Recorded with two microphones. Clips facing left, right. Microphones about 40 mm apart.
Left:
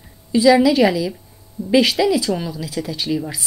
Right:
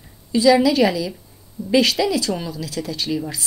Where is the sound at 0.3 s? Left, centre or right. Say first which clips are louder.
Left 2 dB; centre.